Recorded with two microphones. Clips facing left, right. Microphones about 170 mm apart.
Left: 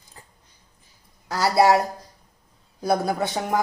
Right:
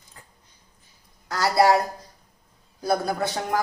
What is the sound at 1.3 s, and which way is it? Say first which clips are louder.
Speech: left 1 dB; 25° left (ahead or behind).